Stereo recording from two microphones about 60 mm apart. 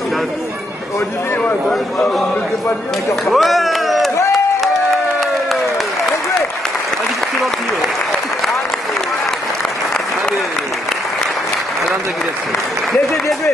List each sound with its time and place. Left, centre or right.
1.4 s speech: centre
3.3 s a sound: centre
12.9 s applause: centre